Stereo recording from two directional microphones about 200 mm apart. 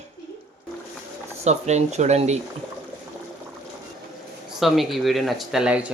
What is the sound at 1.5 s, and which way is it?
Speech, 35° right (ahead or behind).